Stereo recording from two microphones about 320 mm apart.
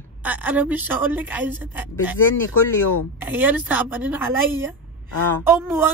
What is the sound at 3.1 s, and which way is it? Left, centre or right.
Speech, centre.